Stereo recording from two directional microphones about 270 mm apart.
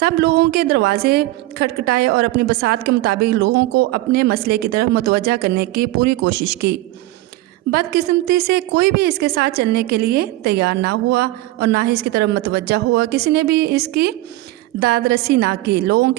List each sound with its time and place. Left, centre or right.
0.0 s a woman's voice: right